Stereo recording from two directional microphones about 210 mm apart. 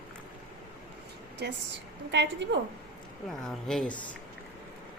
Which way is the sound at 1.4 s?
50° right (ahead or behind).